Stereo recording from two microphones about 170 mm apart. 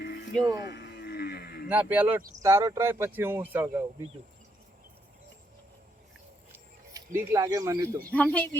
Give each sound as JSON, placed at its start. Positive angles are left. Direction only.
{"t": 0.0, "sound": "music", "side_deg": 70}
{"t": 0.6, "sound": "wild animals", "side_deg": 80}
{"t": 1.6, "sound": "speech", "side_deg": -10}
{"t": 6.9, "sound": "speech", "side_deg": -15}
{"t": 8.1, "sound": "speech", "side_deg": 5}